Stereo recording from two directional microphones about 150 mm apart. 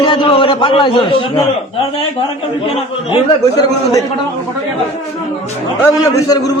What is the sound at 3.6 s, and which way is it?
Speech, 20° left (ahead or behind).